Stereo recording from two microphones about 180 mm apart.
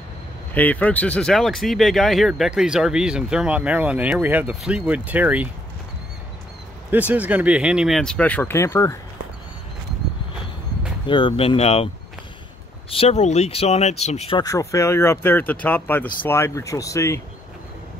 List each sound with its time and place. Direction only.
0.6 s speech: 10° left (ahead or behind); by 5.5 s 10° right (ahead or behind)
6.9 s speech: 10° right (ahead or behind); by 8.9 s 15° left (ahead or behind)
11.1 s speech: 25° left (ahead or behind)
12.9 s speech: 35° left (ahead or behind)
14.4 s speech: 15° left (ahead or behind)